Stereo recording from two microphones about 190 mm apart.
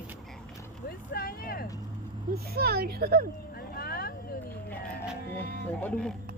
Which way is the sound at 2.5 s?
55° right (ahead or behind).